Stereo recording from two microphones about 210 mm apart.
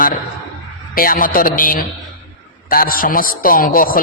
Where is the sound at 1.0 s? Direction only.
40° left (ahead or behind).